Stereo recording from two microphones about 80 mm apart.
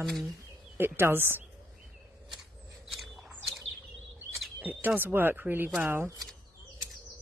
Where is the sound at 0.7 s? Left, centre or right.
Right.